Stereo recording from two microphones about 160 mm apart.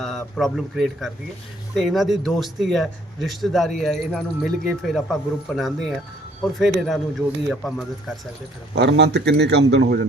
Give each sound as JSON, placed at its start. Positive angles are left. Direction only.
{"t": 0.0, "sound": "speech", "side_deg": 0}
{"t": 8.7, "sound": "a man's voice", "side_deg": -90}